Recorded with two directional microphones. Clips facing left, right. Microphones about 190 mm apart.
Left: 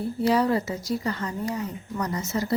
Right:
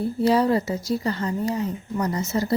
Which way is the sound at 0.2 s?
30° right (ahead or behind).